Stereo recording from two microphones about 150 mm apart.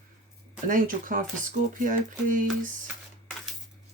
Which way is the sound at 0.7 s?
60° right (ahead or behind).